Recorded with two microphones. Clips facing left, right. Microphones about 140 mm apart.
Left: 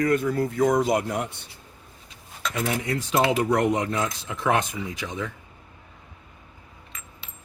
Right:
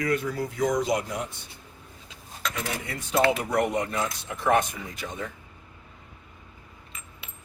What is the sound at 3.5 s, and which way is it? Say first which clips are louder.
Speech: left 3 dB; 90° left.